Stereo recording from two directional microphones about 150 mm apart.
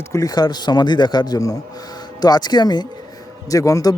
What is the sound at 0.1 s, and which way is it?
Speech, 25° left (ahead or behind).